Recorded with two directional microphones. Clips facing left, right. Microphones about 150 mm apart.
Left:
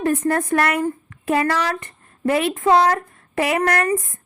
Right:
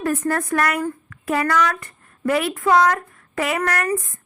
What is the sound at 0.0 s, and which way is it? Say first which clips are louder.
Speech: left 2 dB; 25° left (ahead or behind).